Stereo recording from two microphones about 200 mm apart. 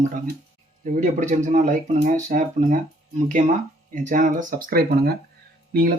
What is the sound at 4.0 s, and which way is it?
Speech, 40° right (ahead or behind).